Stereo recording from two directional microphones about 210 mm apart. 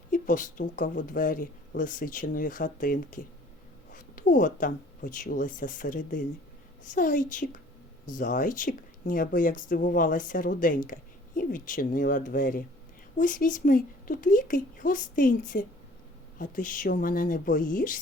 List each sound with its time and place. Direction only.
0.1 s speech: 40° left (ahead or behind)